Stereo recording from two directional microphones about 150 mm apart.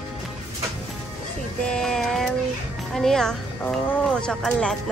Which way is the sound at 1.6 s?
5° left (ahead or behind).